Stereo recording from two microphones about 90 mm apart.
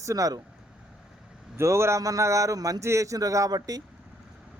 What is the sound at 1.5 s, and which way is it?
A man's voice, 30° right (ahead or behind).